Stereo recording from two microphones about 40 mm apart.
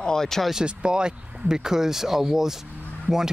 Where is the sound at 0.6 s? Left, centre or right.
Right.